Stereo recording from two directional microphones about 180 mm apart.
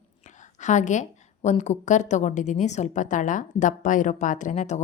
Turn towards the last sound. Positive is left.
turn(degrees=40)  # may be behind; listen again after turning